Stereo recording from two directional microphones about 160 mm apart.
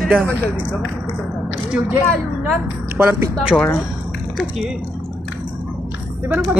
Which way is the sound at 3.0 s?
15° right (ahead or behind).